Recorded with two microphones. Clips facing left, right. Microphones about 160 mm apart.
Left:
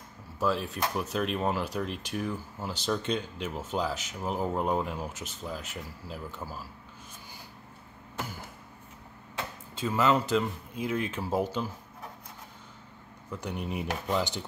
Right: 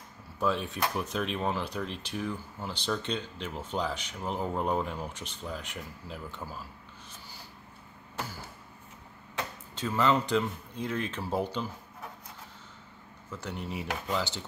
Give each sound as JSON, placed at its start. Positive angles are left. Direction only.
{"t": 0.4, "sound": "speech", "side_deg": 0}
{"t": 9.8, "sound": "speech", "side_deg": 5}
{"t": 13.3, "sound": "speech", "side_deg": 15}